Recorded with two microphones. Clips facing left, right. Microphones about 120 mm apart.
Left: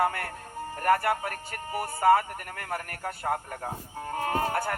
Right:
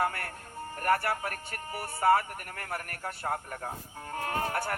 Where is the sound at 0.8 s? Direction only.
35° left (ahead or behind).